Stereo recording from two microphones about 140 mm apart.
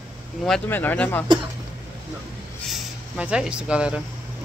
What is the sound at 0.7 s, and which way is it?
Speech, 15° left (ahead or behind).